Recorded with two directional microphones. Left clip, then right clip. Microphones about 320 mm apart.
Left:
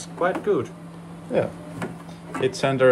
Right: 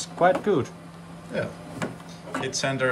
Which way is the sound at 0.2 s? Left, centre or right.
Right.